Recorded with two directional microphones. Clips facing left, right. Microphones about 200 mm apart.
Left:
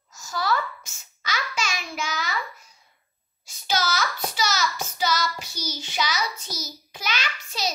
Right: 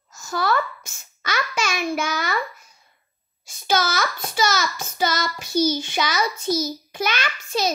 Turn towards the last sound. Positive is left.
turn(degrees=-50)  # may be behind; listen again after turning